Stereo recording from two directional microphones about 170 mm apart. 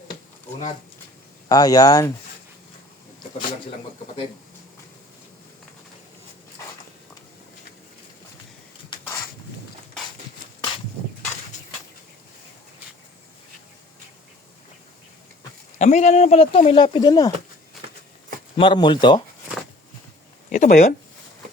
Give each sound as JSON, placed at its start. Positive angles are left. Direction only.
{"t": 1.5, "sound": "speech", "side_deg": 20}
{"t": 15.8, "sound": "speech", "side_deg": 45}
{"t": 18.5, "sound": "speech", "side_deg": 30}
{"t": 20.5, "sound": "speech", "side_deg": 50}